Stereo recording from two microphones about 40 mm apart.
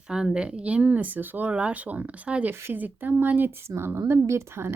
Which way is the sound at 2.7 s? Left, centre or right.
Right.